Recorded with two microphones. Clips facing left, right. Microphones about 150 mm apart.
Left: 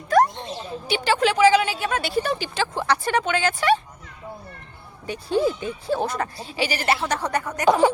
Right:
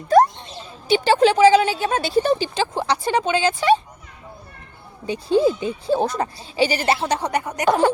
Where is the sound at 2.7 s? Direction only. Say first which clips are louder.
Even; 15° right (ahead or behind).